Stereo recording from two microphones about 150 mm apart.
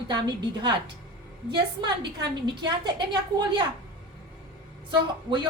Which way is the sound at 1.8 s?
30° right (ahead or behind).